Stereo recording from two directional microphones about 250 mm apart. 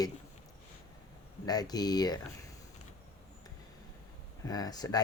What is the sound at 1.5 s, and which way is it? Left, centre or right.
Speech, centre.